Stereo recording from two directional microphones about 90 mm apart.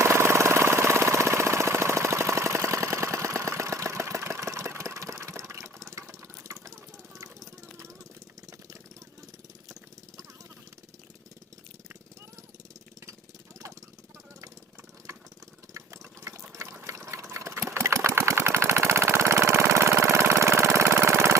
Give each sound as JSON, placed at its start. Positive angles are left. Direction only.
{"t": 0.0, "sound": "engine", "side_deg": -30}
{"t": 7.2, "sound": "vehicle", "side_deg": -35}
{"t": 15.7, "sound": "engine", "side_deg": -30}